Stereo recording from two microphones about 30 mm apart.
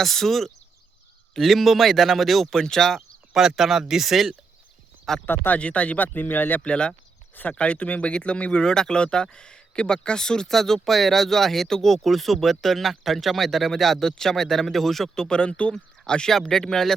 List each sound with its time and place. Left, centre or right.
0.0 s speech: centre
2.6 s speech: centre
3.3 s speech: centre
5.1 s speech: centre
5.5 s speech: left
6.0 s speech: left
6.6 s speech: left
8.6 s speech: left
15.2 s speech: left
15.7 s speech: left
16.3 s speech: centre